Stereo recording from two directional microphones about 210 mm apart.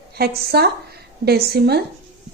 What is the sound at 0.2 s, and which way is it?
A woman's voice, 50° right (ahead or behind).